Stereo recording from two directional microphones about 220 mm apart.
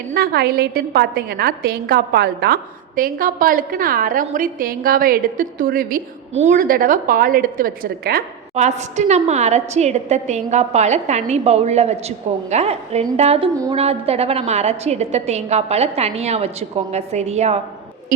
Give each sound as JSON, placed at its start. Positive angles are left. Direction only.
{"t": 0.1, "sound": "a woman's voice", "side_deg": -45}